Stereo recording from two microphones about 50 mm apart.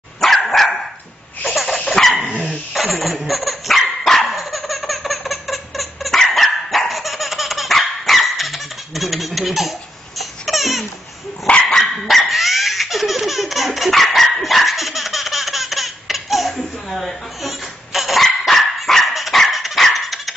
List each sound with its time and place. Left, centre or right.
0.2 s dog: centre
1.4 s a sound: centre
2.2 s dog: right
2.7 s speech: centre
3.3 s dog: centre